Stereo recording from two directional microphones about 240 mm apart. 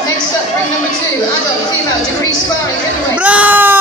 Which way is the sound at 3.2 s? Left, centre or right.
Centre.